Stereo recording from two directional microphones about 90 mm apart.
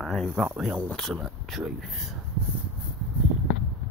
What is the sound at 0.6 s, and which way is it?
Speech, 10° right (ahead or behind).